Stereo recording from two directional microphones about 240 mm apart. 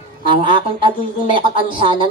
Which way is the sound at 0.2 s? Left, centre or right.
Centre.